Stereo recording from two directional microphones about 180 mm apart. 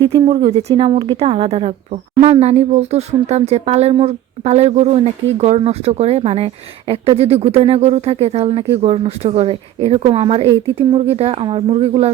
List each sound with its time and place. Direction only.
0.0 s speech: 25° right (ahead or behind)